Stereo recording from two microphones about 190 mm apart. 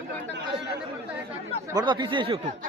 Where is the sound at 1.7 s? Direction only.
20° right (ahead or behind).